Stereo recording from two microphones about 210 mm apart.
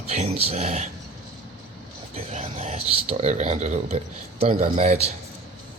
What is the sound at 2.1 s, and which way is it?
Speech, 30° right (ahead or behind).